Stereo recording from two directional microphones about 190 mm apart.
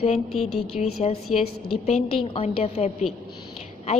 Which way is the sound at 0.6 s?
35° left (ahead or behind).